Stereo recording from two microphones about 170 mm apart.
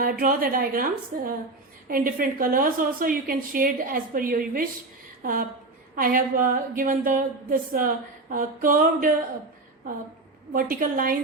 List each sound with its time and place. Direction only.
0.0 s speech: 55° right (ahead or behind)
5.2 s a sound: 55° right (ahead or behind)
6.0 s speech: 55° right (ahead or behind)
10.5 s speech: 55° right (ahead or behind)